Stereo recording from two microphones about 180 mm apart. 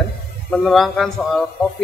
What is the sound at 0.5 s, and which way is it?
Speech, centre (ahead or behind).